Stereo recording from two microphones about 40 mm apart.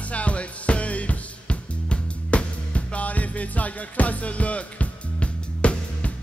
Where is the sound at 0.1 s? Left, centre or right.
Left.